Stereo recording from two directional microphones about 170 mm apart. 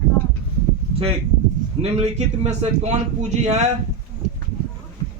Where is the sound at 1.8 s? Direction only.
40° right (ahead or behind).